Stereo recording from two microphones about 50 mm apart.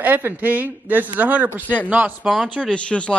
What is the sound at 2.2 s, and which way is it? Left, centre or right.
Speech, centre.